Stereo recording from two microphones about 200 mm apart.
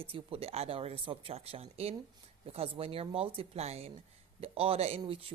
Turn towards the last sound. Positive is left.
turn(degrees=-30)  # may be behind; listen again after turning